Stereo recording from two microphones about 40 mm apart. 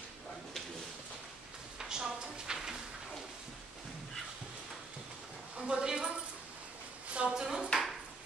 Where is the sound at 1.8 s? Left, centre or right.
Centre.